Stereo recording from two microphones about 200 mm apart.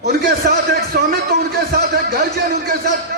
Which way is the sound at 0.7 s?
50° right (ahead or behind).